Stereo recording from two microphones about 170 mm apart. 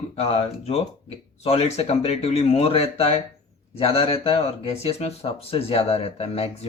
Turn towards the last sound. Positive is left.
turn(degrees=40)  # may be behind; listen again after turning